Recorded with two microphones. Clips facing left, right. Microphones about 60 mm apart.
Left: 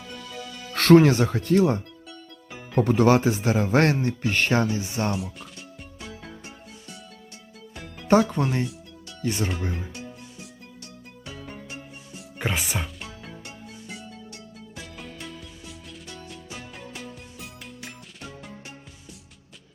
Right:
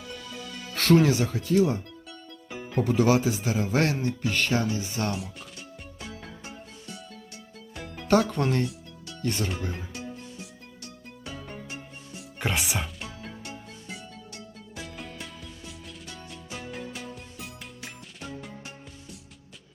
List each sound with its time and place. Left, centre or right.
0.7 s music: left
0.9 s speech: left
2.0 s music: centre
2.8 s speech: left
4.0 s music: left
8.0 s speech: centre
9.7 s music: centre
14.8 s music: centre